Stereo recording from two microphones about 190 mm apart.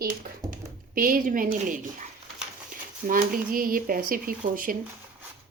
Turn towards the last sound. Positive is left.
turn(degrees=-45)  # may be behind; listen again after turning